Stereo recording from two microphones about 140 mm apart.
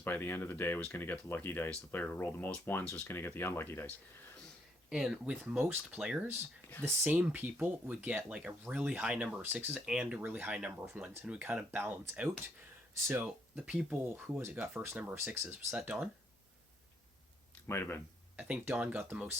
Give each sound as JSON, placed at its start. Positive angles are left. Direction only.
{"t": 0.0, "sound": "speech", "side_deg": 15}
{"t": 4.9, "sound": "speech", "side_deg": -5}
{"t": 17.7, "sound": "speech", "side_deg": 20}
{"t": 18.3, "sound": "speech", "side_deg": -10}